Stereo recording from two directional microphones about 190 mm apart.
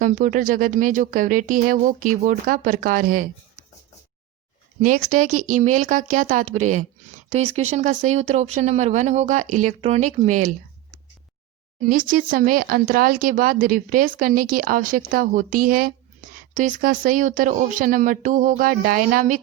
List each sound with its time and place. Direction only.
0.0 s speech: 45° right (ahead or behind)
4.8 s speech: 45° right (ahead or behind)
11.8 s speech: 45° right (ahead or behind)